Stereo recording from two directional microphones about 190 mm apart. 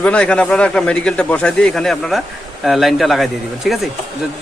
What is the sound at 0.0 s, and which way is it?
A man's voice, 5° left (ahead or behind).